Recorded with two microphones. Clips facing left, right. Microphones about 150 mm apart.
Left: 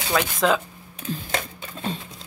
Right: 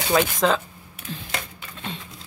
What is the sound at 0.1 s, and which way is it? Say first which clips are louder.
Speech: right 1 dB; centre (ahead or behind).